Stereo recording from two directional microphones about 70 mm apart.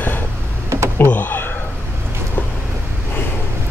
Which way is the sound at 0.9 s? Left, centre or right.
Left.